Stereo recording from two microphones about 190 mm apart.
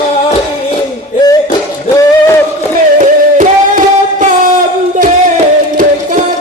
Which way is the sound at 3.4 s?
45° right (ahead or behind).